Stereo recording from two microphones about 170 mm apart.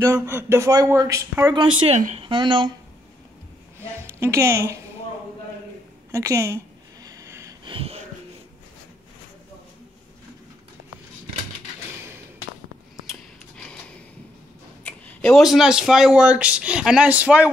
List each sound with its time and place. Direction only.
0.0 s speech: 15° right (ahead or behind)
1.5 s speech: 30° right (ahead or behind)
2.0 s speech: 45° right (ahead or behind)
2.2 s speech: 30° right (ahead or behind)
4.2 s speech: 15° right (ahead or behind)
6.1 s a sound: 15° right (ahead or behind)
7.6 s wheeze: 35° right (ahead or behind)
13.0 s a sound: centre (ahead or behind)
14.8 s a sound: 10° left (ahead or behind)
15.4 s speech: centre (ahead or behind)